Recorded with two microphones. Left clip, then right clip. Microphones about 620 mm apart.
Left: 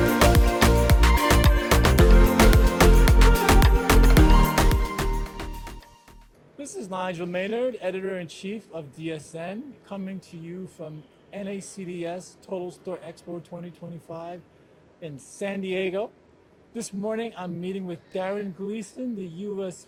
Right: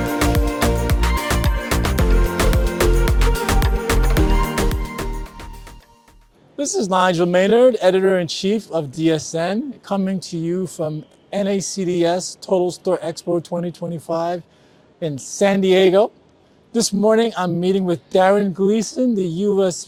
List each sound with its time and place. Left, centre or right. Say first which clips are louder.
0.2 s music: right 2 dB; centre
6.6 s speech: right 15 dB; right